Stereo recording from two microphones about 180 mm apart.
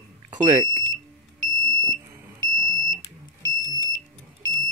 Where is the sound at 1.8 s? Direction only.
15° right (ahead or behind).